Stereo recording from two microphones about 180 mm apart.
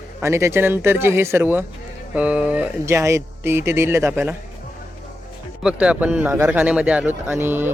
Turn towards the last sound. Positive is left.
turn(degrees=-10)  # may be behind; listen again after turning